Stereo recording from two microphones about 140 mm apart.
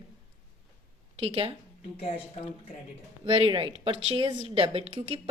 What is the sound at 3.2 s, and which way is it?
A woman's voice, 40° right (ahead or behind).